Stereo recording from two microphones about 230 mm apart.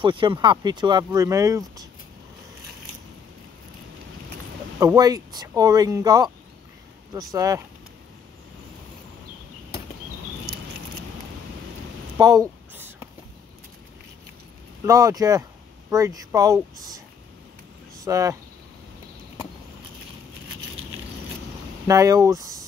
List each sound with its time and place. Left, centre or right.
0.0 s speech: right
4.7 s speech: centre
7.3 s speech: centre
12.2 s a sound: centre
14.9 s speech: centre
18.0 s speech: centre
21.8 s speech: centre